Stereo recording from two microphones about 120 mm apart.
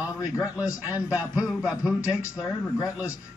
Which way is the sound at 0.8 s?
10° right (ahead or behind).